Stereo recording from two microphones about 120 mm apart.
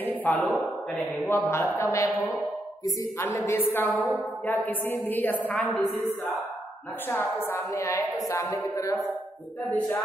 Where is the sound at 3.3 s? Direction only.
20° left (ahead or behind).